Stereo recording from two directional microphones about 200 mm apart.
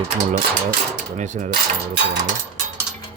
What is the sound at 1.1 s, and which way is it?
Speech, 35° right (ahead or behind).